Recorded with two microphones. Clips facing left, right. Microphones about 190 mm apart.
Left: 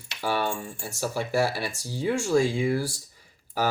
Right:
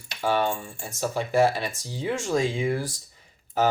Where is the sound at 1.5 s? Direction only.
10° left (ahead or behind).